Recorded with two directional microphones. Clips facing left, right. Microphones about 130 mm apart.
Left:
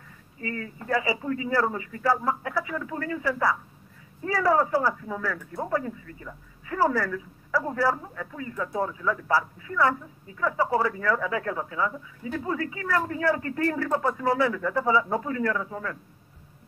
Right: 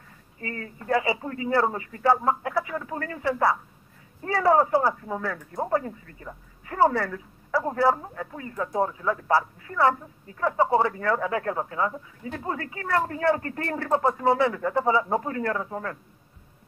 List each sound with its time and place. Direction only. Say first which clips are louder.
0.4 s speech: left 2 dB; 35° right (ahead or behind)
3.3 s speech: right 4 dB; 30° right (ahead or behind)
6.8 s a woman's voice: right 2 dB; 25° right (ahead or behind); by 9.8 s 40° right (ahead or behind)
10.4 s speech: right 3 dB; 25° right (ahead or behind)
11.1 s speech: right 1 dB; 40° right (ahead or behind)